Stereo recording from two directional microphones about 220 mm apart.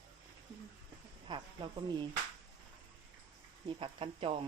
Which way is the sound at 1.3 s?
20° right (ahead or behind).